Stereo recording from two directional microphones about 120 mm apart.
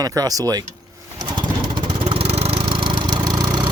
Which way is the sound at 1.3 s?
40° right (ahead or behind).